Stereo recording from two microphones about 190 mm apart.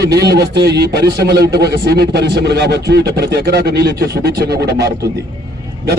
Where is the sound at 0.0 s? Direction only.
60° right (ahead or behind).